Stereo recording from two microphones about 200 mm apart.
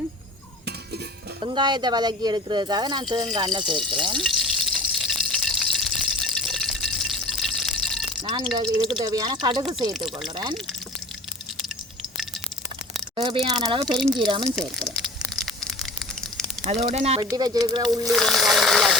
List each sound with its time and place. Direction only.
1.4 s speech: 20° right (ahead or behind)
4.2 s water: centre (ahead or behind)
8.2 s speech: 20° right (ahead or behind)
13.1 s speech: 25° right (ahead or behind)
13.8 s speech: centre (ahead or behind)
14.2 s speech: 25° right (ahead or behind)
14.4 s speech: centre (ahead or behind)
15.4 s a sound: centre (ahead or behind)
16.9 s speech: 30° right (ahead or behind)
17.3 s speech: 20° right (ahead or behind)
18.0 s a sound: centre (ahead or behind)